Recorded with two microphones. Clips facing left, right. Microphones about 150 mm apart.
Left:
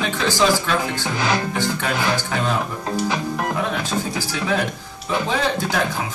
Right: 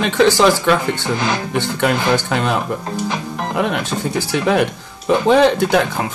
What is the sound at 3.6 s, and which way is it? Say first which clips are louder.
Speech: right 4 dB; 65° right (ahead or behind).